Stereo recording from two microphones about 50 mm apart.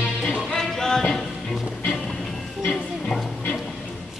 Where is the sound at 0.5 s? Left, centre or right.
Centre.